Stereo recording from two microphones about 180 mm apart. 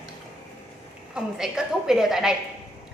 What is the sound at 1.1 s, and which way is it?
A woman's voice, 5° right (ahead or behind).